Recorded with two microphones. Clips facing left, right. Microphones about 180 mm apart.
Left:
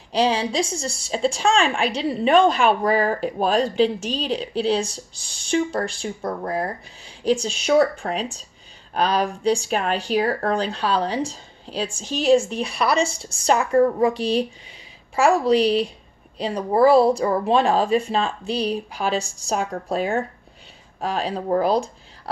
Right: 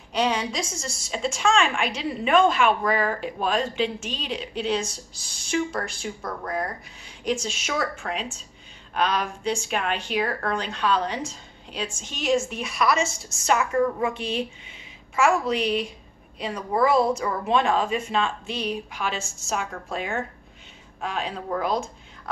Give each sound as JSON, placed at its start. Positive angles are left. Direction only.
{"t": 0.1, "sound": "a woman's voice", "side_deg": 30}